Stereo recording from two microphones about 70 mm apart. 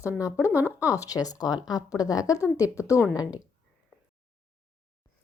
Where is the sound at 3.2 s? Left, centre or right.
Left.